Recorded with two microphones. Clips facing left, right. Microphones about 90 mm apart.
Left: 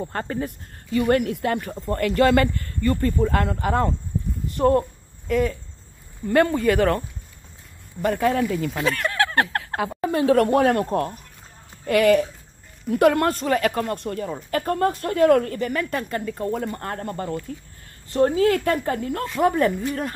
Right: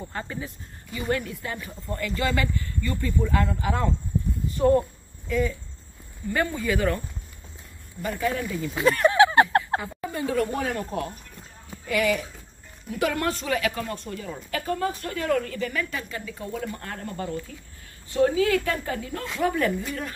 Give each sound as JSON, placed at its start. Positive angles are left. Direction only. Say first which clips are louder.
{"t": 0.1, "sound": "a woman's voice", "louder": "left 6 dB", "side_deg": 50}
{"t": 0.9, "sound": "a woman's voice", "louder": "left 8 dB", "side_deg": 65}
{"t": 8.0, "sound": "a woman's voice", "louder": "left 7 dB", "side_deg": 50}
{"t": 8.5, "sound": "speech", "louder": "left 4 dB", "side_deg": 70}
{"t": 9.0, "sound": "a sound", "louder": "right 8 dB", "side_deg": -15}
{"t": 9.8, "sound": "a woman's voice", "louder": "left 8 dB", "side_deg": 80}
{"t": 19.5, "sound": "speech", "louder": "left 4 dB", "side_deg": 35}